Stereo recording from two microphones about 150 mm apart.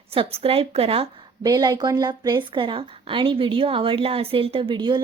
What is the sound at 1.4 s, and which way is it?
Speech, 30° right (ahead or behind).